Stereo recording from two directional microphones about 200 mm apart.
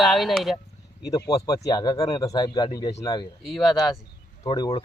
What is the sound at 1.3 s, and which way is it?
Speech, 20° left (ahead or behind).